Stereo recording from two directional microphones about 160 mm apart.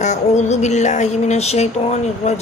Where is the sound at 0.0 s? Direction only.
45° left (ahead or behind).